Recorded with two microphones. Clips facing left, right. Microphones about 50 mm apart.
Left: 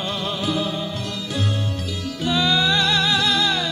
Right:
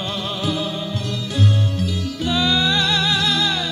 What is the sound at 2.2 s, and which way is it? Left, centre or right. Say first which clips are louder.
Music: even; centre.